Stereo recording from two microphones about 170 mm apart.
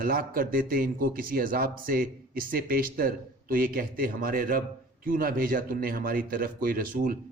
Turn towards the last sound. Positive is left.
turn(degrees=-60)  # may be behind; listen again after turning